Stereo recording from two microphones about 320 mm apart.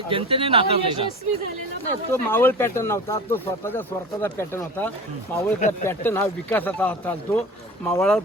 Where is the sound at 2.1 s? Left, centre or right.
Centre.